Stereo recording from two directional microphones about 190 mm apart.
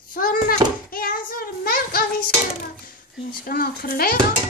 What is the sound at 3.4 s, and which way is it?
Child singing, 50° left (ahead or behind).